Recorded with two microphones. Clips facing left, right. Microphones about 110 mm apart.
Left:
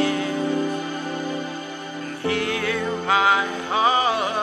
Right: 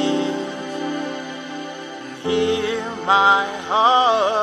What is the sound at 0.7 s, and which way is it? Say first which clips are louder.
Music: right 3 dB; 60° right (ahead or behind).